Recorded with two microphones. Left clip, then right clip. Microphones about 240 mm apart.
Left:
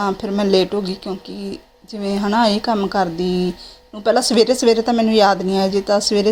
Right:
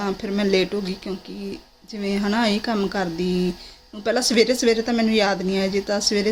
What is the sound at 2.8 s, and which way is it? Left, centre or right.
Speech, centre.